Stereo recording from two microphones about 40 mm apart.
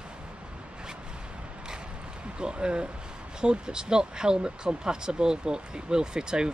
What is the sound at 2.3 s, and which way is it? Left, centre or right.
Speech, right.